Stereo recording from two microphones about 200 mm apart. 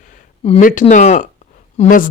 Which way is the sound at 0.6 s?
40° left (ahead or behind).